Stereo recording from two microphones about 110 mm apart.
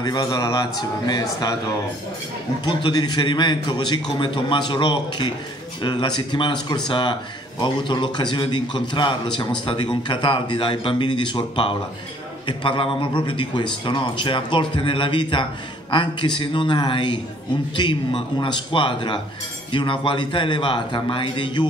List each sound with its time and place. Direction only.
0.0 s speech: 40° left (ahead or behind)
2.6 s a man's voice: 45° left (ahead or behind)